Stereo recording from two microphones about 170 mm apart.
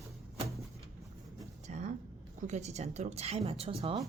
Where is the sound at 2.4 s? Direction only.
45° right (ahead or behind).